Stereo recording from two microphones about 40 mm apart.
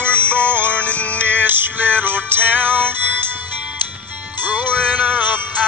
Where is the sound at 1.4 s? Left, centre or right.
Right.